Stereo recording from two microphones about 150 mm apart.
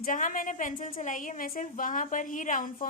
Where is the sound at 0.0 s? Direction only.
60° left (ahead or behind).